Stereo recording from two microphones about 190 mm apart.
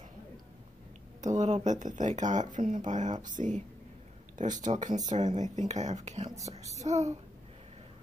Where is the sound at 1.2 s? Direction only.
40° right (ahead or behind).